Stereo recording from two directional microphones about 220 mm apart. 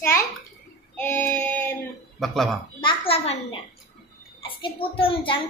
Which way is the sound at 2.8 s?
25° left (ahead or behind).